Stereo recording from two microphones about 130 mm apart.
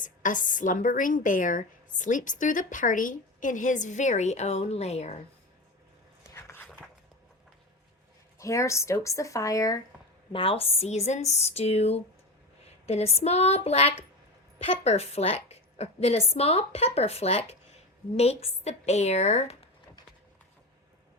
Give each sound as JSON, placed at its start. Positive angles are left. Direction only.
{"t": 0.0, "sound": "a woman's voice", "side_deg": 90}
{"t": 6.2, "sound": "a sound", "side_deg": 20}
{"t": 8.4, "sound": "speech", "side_deg": 25}
{"t": 10.3, "sound": "a woman's voice", "side_deg": 45}